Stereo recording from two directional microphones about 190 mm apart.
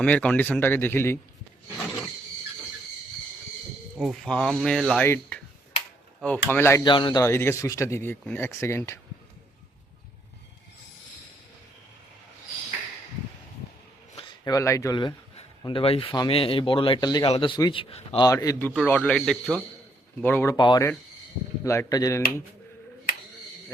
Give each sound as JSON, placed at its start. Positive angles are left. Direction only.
{"t": 0.0, "sound": "speech", "side_deg": 5}
{"t": 3.9, "sound": "speech", "side_deg": 0}
{"t": 5.0, "sound": "speech", "side_deg": 15}
{"t": 6.8, "sound": "speech", "side_deg": 25}
{"t": 14.2, "sound": "a man's voice", "side_deg": 20}
{"t": 18.3, "sound": "speech", "side_deg": 15}
{"t": 18.7, "sound": "speech", "side_deg": 5}